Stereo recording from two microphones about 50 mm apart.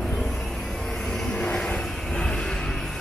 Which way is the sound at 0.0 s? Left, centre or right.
Centre.